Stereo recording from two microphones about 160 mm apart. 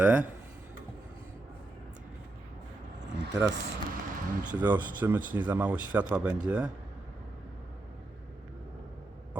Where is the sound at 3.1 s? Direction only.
90° right.